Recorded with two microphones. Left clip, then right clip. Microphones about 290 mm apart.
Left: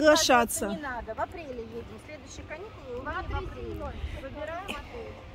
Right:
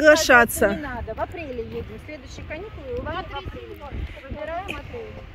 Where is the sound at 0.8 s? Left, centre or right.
Right.